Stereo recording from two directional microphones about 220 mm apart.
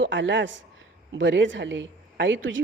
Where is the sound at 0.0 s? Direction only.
55° right (ahead or behind).